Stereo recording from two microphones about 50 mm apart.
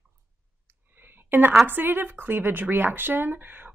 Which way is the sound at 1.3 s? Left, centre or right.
Right.